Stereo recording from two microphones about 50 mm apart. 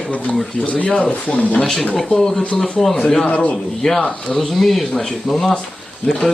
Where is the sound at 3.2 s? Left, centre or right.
Left.